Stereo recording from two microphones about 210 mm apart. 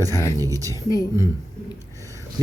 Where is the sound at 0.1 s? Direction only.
15° left (ahead or behind).